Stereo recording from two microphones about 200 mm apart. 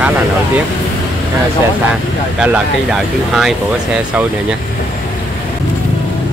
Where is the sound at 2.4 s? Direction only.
5° right (ahead or behind).